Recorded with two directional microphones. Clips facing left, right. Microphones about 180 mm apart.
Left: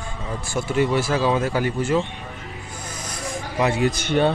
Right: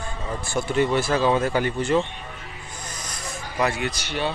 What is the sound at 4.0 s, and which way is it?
Speech, 55° left (ahead or behind).